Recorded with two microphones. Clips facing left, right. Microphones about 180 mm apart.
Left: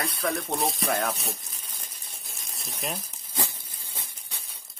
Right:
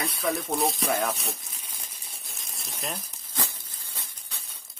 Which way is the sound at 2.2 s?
Centre (ahead or behind).